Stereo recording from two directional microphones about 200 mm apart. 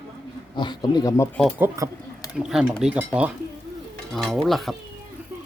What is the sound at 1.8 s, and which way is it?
Speech, 15° right (ahead or behind).